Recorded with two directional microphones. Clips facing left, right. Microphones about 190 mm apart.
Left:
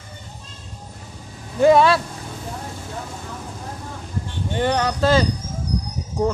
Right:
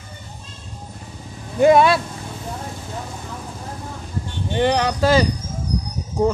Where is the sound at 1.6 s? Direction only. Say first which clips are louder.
Right 1 dB; 15° right (ahead or behind).